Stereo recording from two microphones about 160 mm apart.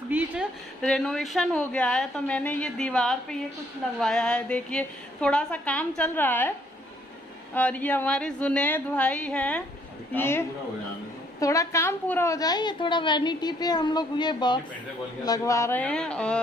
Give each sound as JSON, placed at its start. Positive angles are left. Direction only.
{"t": 0.1, "sound": "a sound", "side_deg": -10}
{"t": 0.8, "sound": "a woman's voice", "side_deg": 5}
{"t": 7.5, "sound": "a woman's voice", "side_deg": 10}